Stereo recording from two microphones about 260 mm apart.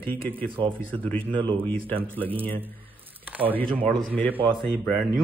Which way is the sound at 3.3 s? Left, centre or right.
Centre.